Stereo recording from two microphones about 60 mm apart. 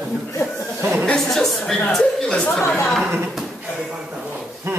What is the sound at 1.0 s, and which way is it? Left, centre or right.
Chuckle, centre.